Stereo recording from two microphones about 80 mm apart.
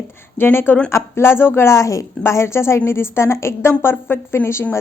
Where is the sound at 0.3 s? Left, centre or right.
Left.